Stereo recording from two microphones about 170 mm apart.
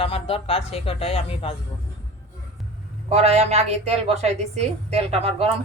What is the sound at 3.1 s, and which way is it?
A woman's voice, 40° right (ahead or behind).